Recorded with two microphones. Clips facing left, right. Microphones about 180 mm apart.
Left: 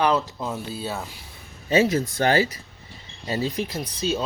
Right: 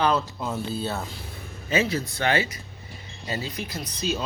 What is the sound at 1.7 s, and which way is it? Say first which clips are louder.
A man's voice: left 5 dB; 40° left (ahead or behind).